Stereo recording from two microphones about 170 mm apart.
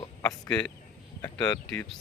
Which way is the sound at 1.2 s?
20° left (ahead or behind).